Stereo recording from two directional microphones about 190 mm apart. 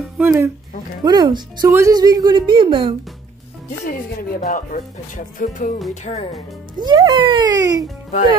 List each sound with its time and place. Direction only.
0.2 s speech: 10° right (ahead or behind)
1.0 s speech: 20° right (ahead or behind)
3.8 s speech: 50° left (ahead or behind)
6.8 s speech: 20° right (ahead or behind)